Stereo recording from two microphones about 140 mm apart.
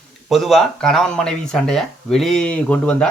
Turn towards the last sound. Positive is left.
turn(degrees=5)  # may be behind; listen again after turning